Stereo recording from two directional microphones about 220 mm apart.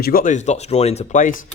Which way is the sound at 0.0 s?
40° left (ahead or behind).